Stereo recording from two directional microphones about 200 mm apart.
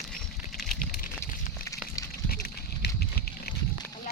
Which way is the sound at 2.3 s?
50° left (ahead or behind).